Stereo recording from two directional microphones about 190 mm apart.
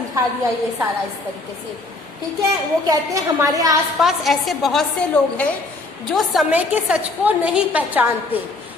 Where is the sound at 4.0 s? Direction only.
Centre (ahead or behind).